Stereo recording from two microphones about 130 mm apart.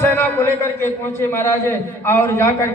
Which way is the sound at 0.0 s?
15° left (ahead or behind).